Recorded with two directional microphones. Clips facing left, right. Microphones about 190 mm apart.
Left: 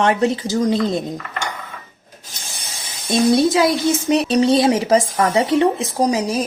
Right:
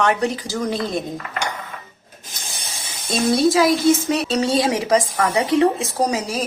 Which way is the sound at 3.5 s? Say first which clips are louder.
Right 1 dB; 20° left (ahead or behind).